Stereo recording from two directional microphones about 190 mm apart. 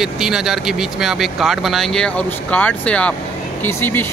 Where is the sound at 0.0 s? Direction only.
5° right (ahead or behind).